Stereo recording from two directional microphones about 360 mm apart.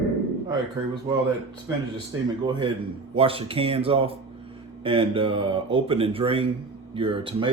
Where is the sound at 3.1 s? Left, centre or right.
Centre.